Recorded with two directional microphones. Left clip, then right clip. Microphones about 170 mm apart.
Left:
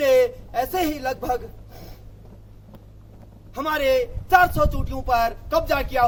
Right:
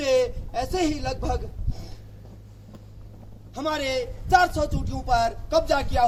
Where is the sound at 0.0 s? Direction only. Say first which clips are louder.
Left 5 dB; centre (ahead or behind).